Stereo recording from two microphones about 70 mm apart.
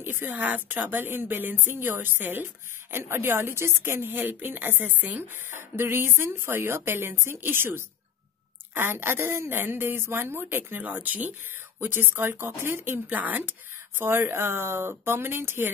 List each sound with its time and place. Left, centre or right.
0.0 s speech: right